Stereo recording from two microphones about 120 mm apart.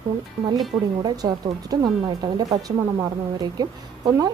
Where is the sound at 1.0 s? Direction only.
35° right (ahead or behind).